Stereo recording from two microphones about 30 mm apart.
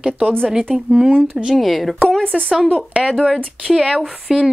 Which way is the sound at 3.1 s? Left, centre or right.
Left.